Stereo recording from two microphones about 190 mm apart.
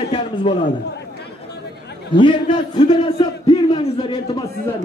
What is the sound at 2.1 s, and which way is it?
A man's voice, 25° left (ahead or behind).